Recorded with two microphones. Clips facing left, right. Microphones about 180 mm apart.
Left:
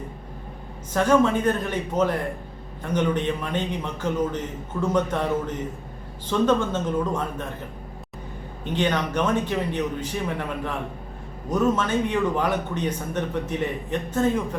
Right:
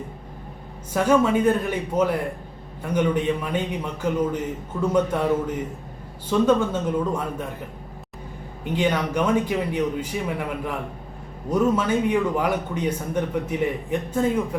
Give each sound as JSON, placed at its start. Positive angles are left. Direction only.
{"t": 0.9, "sound": "a man's voice", "side_deg": -10}
{"t": 8.6, "sound": "a man's voice", "side_deg": -10}